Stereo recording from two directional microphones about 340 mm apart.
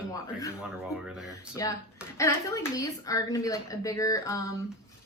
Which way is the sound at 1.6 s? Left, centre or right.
Centre.